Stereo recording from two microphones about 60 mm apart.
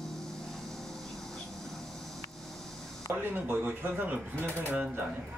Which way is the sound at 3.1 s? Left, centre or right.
Right.